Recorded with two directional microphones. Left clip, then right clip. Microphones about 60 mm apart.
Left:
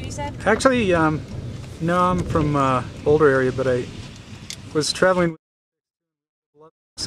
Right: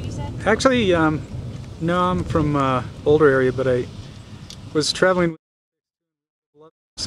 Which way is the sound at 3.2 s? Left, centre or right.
Centre.